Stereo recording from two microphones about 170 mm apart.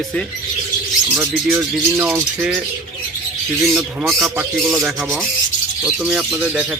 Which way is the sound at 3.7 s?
Centre (ahead or behind).